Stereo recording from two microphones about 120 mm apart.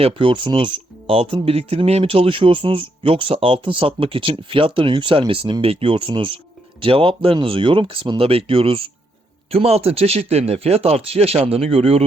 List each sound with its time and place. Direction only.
0.0 s speech: 45° right (ahead or behind)
8.2 s speech: 55° right (ahead or behind)